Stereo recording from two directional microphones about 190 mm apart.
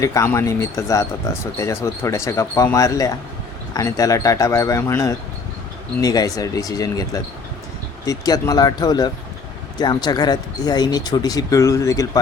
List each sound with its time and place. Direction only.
0.0 s speech: 15° left (ahead or behind)